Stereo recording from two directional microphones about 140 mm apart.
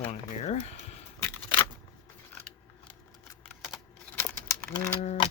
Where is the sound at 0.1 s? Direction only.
50° left (ahead or behind).